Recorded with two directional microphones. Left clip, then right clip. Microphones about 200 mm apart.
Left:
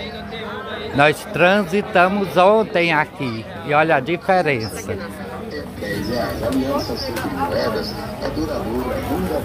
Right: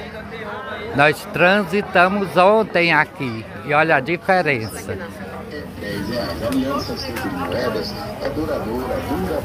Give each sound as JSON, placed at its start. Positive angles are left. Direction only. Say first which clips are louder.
{"t": 0.9, "sound": "speech", "louder": "even", "side_deg": 0}
{"t": 7.5, "sound": "speech", "louder": "left 1 dB", "side_deg": -40}